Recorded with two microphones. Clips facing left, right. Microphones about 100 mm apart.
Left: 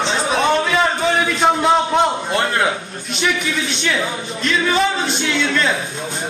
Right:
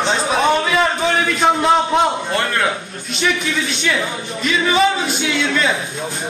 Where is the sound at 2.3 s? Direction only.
20° left (ahead or behind).